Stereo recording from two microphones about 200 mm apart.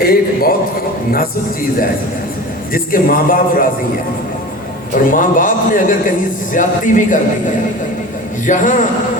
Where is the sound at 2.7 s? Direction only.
45° left (ahead or behind).